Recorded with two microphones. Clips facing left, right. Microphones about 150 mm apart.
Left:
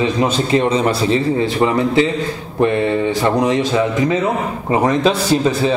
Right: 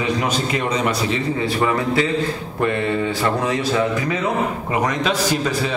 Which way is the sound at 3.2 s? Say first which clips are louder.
Left 5 dB; 25° left (ahead or behind).